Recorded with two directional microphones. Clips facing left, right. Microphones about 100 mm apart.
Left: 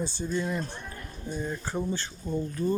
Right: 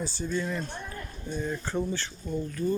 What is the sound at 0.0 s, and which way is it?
Speech, 20° left (ahead or behind).